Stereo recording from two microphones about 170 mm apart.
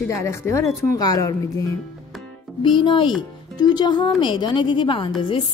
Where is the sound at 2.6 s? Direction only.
30° left (ahead or behind).